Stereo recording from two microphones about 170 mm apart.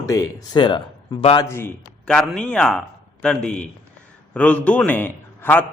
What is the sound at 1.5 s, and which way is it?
A man's voice, 15° left (ahead or behind).